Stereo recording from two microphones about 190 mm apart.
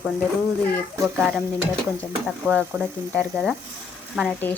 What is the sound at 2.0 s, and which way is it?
Speech, 5° left (ahead or behind).